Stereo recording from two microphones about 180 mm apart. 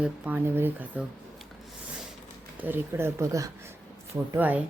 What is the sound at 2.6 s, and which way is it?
A woman's voice, 10° right (ahead or behind).